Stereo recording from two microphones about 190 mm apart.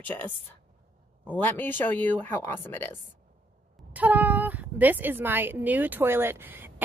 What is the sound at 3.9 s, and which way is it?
A woman's voice, 10° right (ahead or behind).